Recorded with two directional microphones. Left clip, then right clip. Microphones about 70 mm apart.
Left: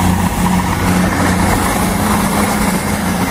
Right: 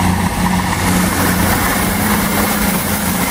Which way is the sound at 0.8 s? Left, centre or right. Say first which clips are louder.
Left 1 dB; right.